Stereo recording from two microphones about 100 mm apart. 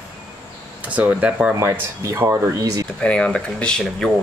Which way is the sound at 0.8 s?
15° right (ahead or behind).